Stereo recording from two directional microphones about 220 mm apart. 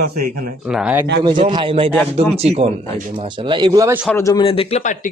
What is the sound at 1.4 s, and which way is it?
Speech, 20° right (ahead or behind).